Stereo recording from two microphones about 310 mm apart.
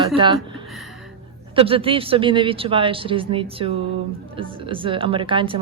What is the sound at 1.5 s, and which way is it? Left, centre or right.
Speech, centre.